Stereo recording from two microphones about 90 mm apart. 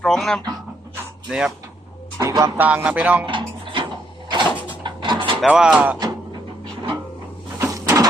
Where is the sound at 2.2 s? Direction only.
35° right (ahead or behind).